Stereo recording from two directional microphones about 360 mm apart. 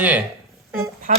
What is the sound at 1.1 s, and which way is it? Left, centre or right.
Speech, right.